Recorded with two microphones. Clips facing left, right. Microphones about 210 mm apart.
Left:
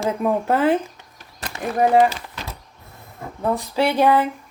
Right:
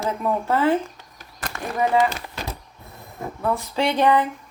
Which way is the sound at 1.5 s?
20° left (ahead or behind).